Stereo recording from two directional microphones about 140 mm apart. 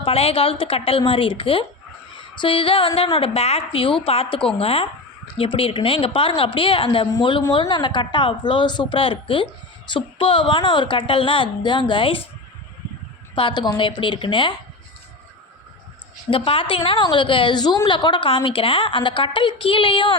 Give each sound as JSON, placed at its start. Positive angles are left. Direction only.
{"t": 0.0, "sound": "a woman's voice", "side_deg": 45}
{"t": 13.3, "sound": "a woman's voice", "side_deg": 35}
{"t": 16.3, "sound": "a woman's voice", "side_deg": 40}